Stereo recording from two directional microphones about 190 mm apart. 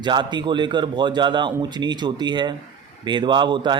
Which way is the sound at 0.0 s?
25° right (ahead or behind).